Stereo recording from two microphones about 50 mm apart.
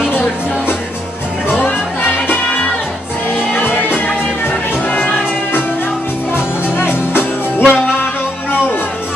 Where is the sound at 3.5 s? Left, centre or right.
Left.